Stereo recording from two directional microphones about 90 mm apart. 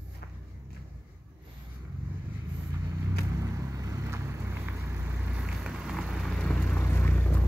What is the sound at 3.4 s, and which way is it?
Vehicle, 40° right (ahead or behind).